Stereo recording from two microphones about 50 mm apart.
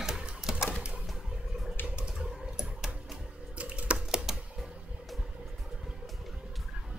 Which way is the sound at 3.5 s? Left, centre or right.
Right.